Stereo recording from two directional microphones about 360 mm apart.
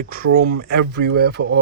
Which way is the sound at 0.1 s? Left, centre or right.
Right.